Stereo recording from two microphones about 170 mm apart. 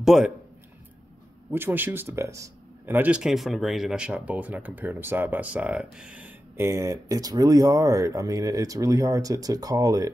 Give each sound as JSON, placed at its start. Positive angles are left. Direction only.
{"t": 0.0, "sound": "speech", "side_deg": 0}
{"t": 1.5, "sound": "speech", "side_deg": -10}